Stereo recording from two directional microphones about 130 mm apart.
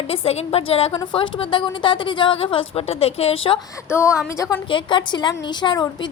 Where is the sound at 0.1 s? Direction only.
50° left (ahead or behind).